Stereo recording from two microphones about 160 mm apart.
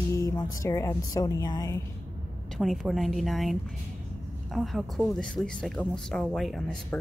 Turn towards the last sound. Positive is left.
turn(degrees=5)  # may be behind; listen again after turning